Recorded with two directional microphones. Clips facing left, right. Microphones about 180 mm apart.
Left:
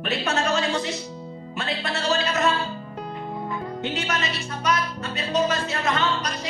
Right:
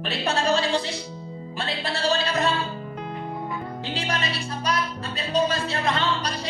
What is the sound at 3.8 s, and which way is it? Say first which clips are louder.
Music: left 1 dB; 30° right (ahead or behind).